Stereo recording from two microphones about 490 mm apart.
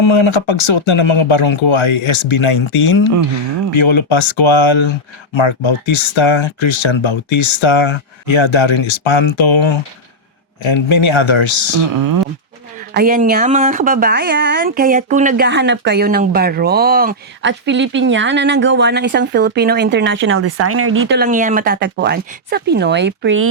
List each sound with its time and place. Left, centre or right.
0.0 s speech: left
12.9 s speech: centre